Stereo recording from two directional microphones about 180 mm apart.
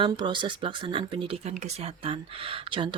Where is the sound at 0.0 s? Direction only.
25° right (ahead or behind).